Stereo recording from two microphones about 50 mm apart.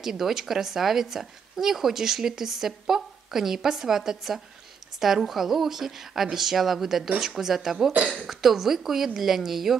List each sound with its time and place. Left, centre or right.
0.0 s speech: centre
7.9 s speech: right
8.3 s speech: centre